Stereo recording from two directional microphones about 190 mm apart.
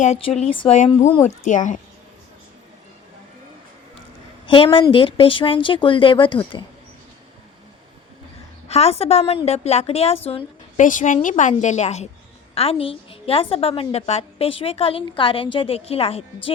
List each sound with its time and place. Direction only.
0.0 s a woman's voice: 40° left (ahead or behind)
4.4 s a woman's voice: 25° left (ahead or behind)
8.6 s a woman's voice: 35° left (ahead or behind)
10.8 s a woman's voice: 45° left (ahead or behind)